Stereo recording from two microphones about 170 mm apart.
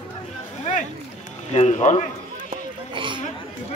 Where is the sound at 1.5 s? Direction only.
40° left (ahead or behind).